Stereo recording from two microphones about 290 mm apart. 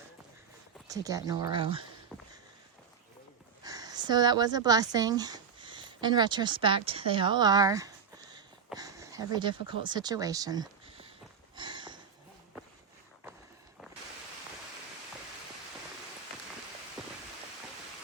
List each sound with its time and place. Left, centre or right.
0.9 s speech: centre
3.6 s speech: centre
11.5 s a sound: centre
17.0 s rain: centre